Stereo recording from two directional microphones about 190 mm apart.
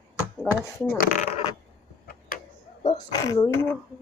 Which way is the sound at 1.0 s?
40° left (ahead or behind).